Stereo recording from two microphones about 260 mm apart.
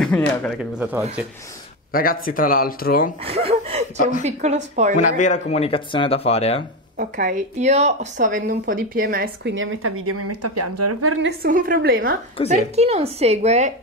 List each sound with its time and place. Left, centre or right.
0.0 s speech: centre
1.9 s speech: left
3.3 s a woman's voice: right
4.9 s speech: left
7.0 s a woman's voice: right
11.2 s a woman's voice: right